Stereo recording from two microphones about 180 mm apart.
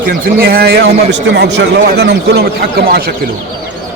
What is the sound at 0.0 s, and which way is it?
A man's voice, 55° right (ahead or behind).